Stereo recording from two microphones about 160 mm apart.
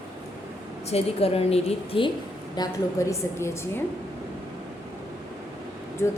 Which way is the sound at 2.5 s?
20° left (ahead or behind).